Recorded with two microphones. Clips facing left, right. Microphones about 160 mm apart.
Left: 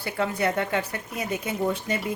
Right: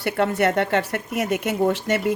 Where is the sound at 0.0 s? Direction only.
70° right (ahead or behind).